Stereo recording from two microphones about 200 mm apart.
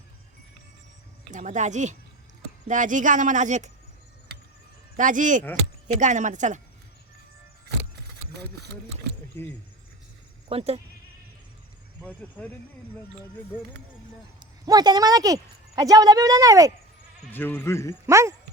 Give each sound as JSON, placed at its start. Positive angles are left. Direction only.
{"t": 1.3, "sound": "speech", "side_deg": -40}
{"t": 4.9, "sound": "speech", "side_deg": -40}
{"t": 10.5, "sound": "speech", "side_deg": -30}
{"t": 12.0, "sound": "speech", "side_deg": 5}
{"t": 14.3, "sound": "speech", "side_deg": -20}
{"t": 17.3, "sound": "speech", "side_deg": 10}
{"t": 18.0, "sound": "speech", "side_deg": -15}